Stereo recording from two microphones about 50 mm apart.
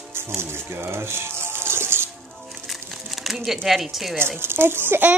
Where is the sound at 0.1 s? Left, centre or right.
Right.